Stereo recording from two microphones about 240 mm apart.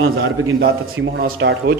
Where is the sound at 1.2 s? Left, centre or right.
Right.